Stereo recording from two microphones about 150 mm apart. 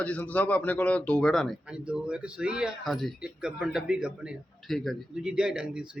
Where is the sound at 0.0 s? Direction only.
10° left (ahead or behind).